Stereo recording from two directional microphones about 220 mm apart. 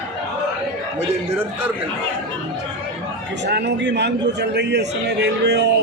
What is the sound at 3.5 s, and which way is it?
A man's voice, 50° right (ahead or behind).